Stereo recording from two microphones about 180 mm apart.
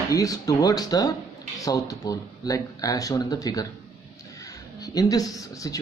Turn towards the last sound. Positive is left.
turn(degrees=20)  # may be behind; listen again after turning